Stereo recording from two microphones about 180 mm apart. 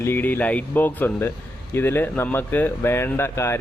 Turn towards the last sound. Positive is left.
turn(degrees=15)  # may be behind; listen again after turning